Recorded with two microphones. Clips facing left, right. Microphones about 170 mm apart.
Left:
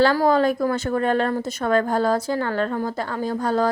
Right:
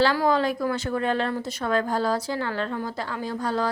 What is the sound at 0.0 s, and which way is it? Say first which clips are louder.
A woman's voice: left 4 dB; 45° left (ahead or behind).